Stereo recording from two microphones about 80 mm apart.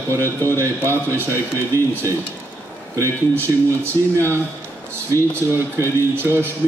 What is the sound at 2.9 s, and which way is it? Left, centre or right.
A man's voice, right.